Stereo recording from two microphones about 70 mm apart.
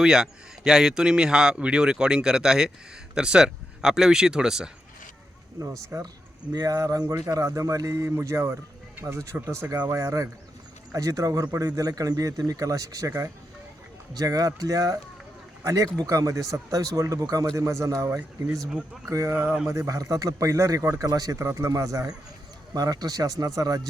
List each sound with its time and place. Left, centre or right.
0.0 s speech: centre
5.5 s speech: right
6.5 s speech: right
14.1 s speech: right
19.3 s speech: right
19.9 s speech: right
21.3 s speech: right
22.7 s speech: right